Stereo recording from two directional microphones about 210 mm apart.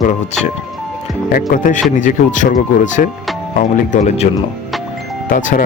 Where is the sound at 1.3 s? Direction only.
40° left (ahead or behind).